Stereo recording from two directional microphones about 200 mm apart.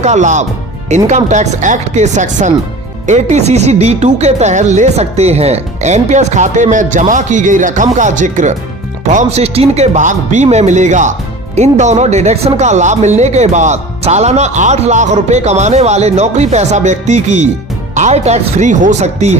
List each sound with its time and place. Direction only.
0.0 s speech: 35° right (ahead or behind)